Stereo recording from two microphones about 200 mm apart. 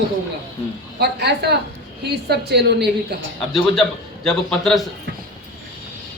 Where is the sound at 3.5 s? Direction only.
Centre (ahead or behind).